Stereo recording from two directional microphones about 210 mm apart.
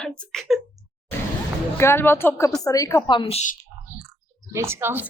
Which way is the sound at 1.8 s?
10° left (ahead or behind).